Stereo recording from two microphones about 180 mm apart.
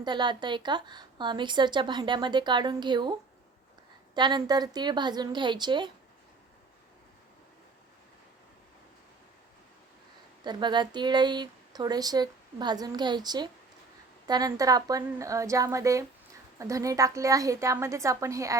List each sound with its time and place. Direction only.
0.0 s a woman's voice: 25° right (ahead or behind)
10.4 s a woman's voice: 25° right (ahead or behind)